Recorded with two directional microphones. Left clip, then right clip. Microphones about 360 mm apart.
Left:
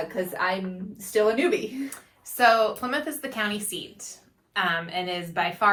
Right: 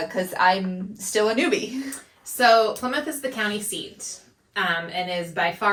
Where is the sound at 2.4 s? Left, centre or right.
Centre.